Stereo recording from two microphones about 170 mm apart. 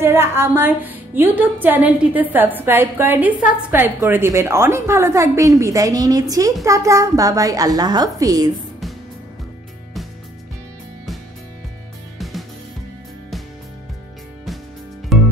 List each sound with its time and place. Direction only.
0.0 s speech: 15° right (ahead or behind)
12.2 s music: centre (ahead or behind)
15.1 s music: centre (ahead or behind)